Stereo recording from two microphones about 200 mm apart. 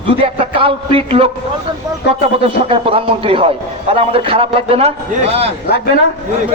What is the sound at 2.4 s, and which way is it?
A man's voice, 30° right (ahead or behind).